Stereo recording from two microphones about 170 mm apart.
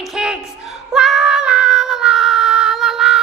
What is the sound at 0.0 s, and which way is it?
Female singing, centre (ahead or behind).